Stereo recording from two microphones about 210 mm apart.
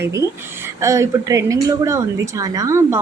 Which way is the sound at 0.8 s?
15° right (ahead or behind).